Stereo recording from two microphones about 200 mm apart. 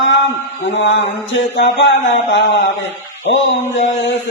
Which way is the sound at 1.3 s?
65° left (ahead or behind).